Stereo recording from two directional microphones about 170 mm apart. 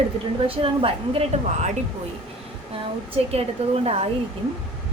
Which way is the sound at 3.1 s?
35° right (ahead or behind).